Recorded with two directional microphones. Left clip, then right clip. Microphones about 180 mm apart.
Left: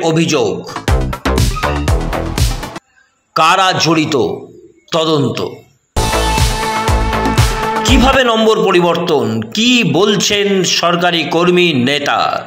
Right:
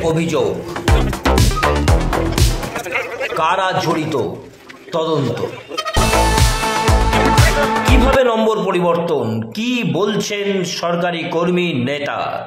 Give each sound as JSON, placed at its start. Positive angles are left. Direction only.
{"t": 0.0, "sound": "music", "side_deg": 10}
{"t": 3.3, "sound": "a man's voice", "side_deg": 15}
{"t": 5.9, "sound": "music", "side_deg": 0}
{"t": 8.0, "sound": "a man's voice", "side_deg": 10}